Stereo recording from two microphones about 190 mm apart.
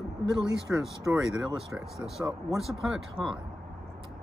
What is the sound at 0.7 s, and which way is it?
Speech, 5° right (ahead or behind).